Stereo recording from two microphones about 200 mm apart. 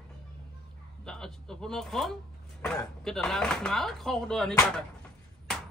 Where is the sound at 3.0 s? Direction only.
Centre (ahead or behind).